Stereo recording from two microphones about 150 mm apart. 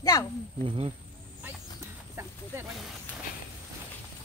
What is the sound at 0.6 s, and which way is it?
Speech, 35° right (ahead or behind).